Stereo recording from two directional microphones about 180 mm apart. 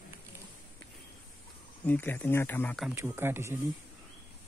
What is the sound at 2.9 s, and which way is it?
Speech, 15° right (ahead or behind).